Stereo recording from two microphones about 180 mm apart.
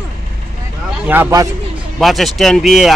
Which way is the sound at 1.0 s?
10° right (ahead or behind).